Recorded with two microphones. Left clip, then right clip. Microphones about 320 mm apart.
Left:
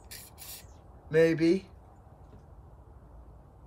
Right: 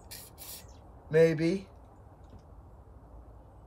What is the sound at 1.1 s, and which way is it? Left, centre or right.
Speech, centre.